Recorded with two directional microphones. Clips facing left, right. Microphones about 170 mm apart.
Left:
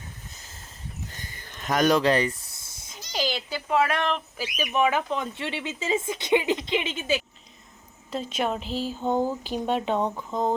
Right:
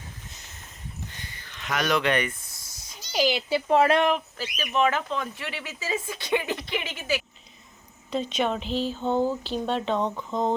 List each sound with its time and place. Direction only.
1.1 s a sound: 45° left (ahead or behind); by 3.0 s 25° left (ahead or behind)
3.1 s speech: 10° right (ahead or behind)
3.5 s speech: 35° right (ahead or behind)
4.4 s speech: 15° left (ahead or behind)
8.1 s speech: 5° left (ahead or behind)